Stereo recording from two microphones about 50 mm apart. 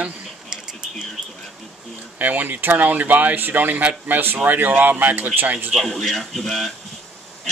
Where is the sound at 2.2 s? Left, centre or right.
Right.